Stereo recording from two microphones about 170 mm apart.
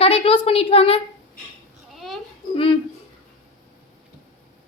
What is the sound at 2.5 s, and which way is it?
Speech, 30° left (ahead or behind).